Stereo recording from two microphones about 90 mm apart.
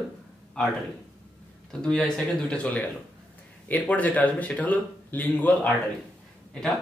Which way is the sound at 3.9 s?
15° left (ahead or behind).